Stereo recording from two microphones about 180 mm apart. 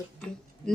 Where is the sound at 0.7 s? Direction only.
5° left (ahead or behind).